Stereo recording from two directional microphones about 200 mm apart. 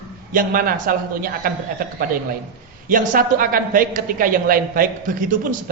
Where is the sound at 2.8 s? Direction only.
40° right (ahead or behind).